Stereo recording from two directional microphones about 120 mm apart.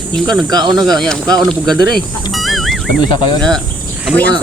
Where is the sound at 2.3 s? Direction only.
Centre (ahead or behind).